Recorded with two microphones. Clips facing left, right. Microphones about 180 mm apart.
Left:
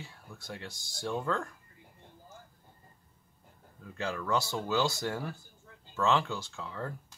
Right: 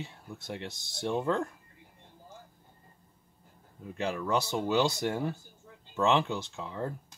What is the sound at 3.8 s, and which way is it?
Speech, 20° right (ahead or behind).